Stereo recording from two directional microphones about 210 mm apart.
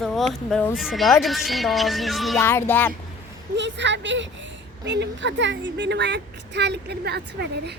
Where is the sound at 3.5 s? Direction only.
60° right (ahead or behind).